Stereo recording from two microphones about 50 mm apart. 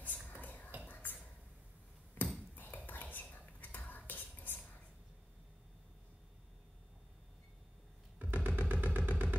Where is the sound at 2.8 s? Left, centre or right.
Left.